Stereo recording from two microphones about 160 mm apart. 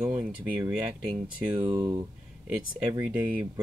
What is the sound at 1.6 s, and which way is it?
Speech, 25° right (ahead or behind).